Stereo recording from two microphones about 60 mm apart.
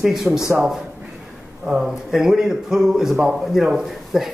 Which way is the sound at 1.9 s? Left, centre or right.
Centre.